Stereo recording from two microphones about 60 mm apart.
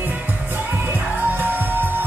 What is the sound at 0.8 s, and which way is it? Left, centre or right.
Music, right.